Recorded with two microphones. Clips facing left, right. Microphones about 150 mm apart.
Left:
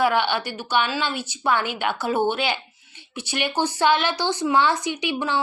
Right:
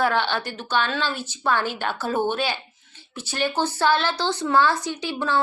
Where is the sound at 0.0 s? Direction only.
15° left (ahead or behind).